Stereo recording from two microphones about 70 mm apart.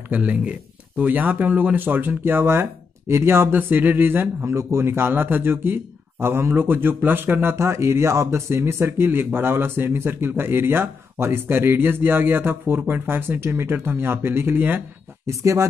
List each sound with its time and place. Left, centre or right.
0.1 s speech: centre
7.5 s speech: right
15.2 s speech: right